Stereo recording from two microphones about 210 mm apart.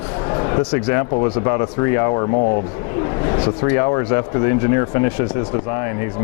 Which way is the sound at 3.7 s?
20° left (ahead or behind).